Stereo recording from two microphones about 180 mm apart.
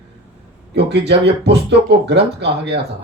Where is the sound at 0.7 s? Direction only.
65° right (ahead or behind).